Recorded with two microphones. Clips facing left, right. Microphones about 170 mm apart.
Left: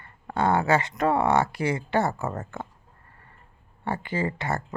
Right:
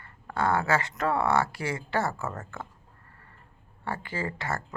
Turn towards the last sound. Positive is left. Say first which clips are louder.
# left 5 dB
turn(degrees=20)  # may be behind; listen again after turning